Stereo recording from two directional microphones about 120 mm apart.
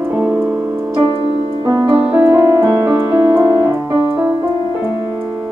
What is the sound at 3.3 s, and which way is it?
Keyboard, 20° right (ahead or behind).